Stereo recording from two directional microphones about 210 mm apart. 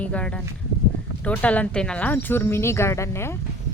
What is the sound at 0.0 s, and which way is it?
Speech, 5° left (ahead or behind).